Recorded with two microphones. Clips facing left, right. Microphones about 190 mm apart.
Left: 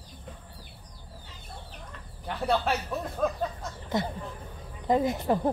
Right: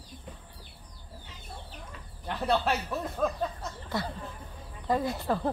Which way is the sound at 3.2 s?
Centre (ahead or behind).